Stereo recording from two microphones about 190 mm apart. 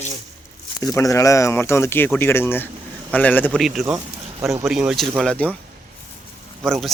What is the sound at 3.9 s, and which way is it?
Speech, 15° right (ahead or behind).